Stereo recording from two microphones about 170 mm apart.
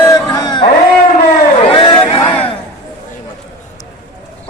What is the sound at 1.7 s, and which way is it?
Crowd, 30° left (ahead or behind).